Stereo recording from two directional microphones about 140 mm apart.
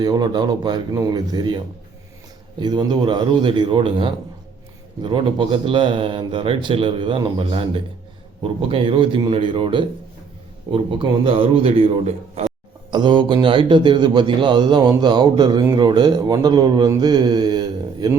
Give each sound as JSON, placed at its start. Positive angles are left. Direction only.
{"t": 0.0, "sound": "speech", "side_deg": -30}
{"t": 12.9, "sound": "speech", "side_deg": -35}
{"t": 17.0, "sound": "mantra", "side_deg": -30}